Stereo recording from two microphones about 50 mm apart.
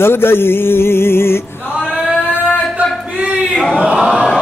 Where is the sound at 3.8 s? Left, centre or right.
Centre.